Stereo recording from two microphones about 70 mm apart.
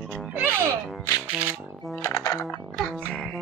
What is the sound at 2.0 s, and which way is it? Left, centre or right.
Music, left.